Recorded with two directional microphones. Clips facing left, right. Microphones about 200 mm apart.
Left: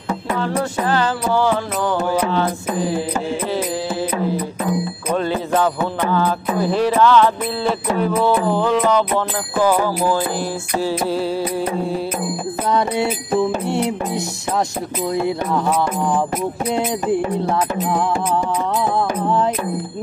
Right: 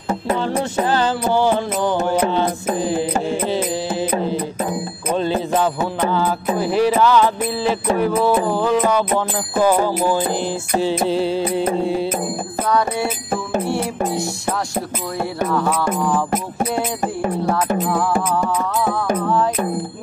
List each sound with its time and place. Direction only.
0.3 s music: 30° right (ahead or behind)
5.1 s music: 25° right (ahead or behind)
11.2 s music: 25° right (ahead or behind)
12.6 s music: 20° left (ahead or behind)